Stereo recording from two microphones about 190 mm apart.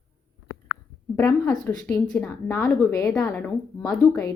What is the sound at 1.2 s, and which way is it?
Speech, 10° left (ahead or behind).